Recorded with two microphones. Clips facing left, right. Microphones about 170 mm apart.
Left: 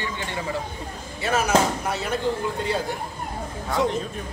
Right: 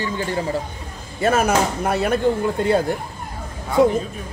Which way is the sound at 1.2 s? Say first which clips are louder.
Right 3 dB; 50° right (ahead or behind).